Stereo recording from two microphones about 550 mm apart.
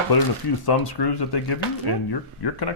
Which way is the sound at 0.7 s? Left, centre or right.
Left.